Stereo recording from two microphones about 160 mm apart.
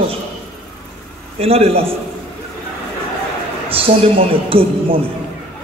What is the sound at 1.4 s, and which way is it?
Speech, 40° right (ahead or behind).